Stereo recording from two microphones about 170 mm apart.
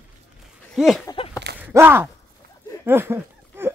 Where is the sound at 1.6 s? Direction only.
15° right (ahead or behind).